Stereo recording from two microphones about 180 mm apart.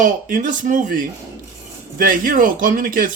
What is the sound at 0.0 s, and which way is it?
Speech, 50° right (ahead or behind).